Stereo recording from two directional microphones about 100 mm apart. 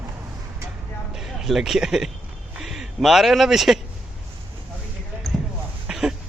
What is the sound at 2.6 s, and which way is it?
Speech, 5° right (ahead or behind).